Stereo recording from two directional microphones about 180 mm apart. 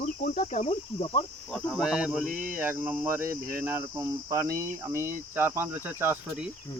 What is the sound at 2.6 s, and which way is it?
Cricket, 10° right (ahead or behind).